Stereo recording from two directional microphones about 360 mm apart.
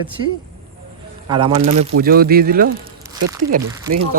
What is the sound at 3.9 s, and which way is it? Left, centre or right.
Speech, right.